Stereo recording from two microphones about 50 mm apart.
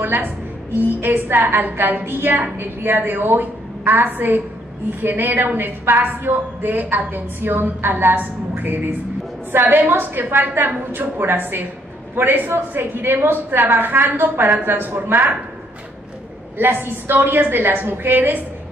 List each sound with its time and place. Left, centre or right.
0.0 s a woman's voice: right
16.5 s a woman's voice: right